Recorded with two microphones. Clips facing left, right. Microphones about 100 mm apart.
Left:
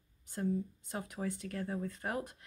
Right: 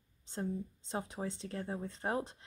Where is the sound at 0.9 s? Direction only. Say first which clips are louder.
Even; 25° right (ahead or behind).